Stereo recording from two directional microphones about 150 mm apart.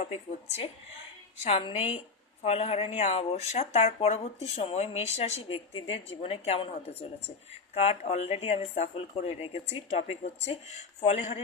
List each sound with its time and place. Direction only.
1.5 s a woman's voice: 40° left (ahead or behind)